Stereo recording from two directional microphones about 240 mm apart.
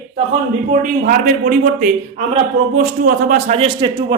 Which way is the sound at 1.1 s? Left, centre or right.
Right.